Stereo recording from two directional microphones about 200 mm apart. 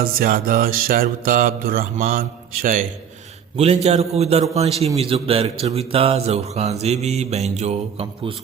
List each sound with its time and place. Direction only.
0.0 s music: 45° right (ahead or behind)
3.6 s speech: 30° right (ahead or behind)